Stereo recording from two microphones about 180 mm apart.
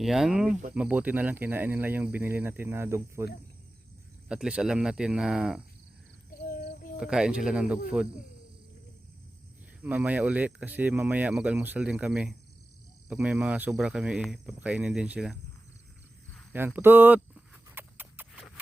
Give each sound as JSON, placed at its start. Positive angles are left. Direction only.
{"t": 0.0, "sound": "speech", "side_deg": 0}
{"t": 4.3, "sound": "speech", "side_deg": -5}
{"t": 6.4, "sound": "a sound", "side_deg": 50}
{"t": 7.0, "sound": "speech", "side_deg": -5}
{"t": 9.8, "sound": "speech", "side_deg": -10}
{"t": 16.5, "sound": "a sound", "side_deg": -10}